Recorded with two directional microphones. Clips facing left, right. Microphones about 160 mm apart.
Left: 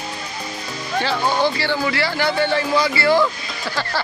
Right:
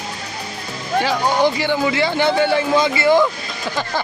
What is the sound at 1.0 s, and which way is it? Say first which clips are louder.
Speech: right 2 dB; 15° right (ahead or behind).